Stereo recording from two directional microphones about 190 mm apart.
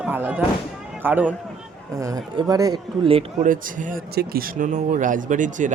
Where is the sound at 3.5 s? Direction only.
45° right (ahead or behind).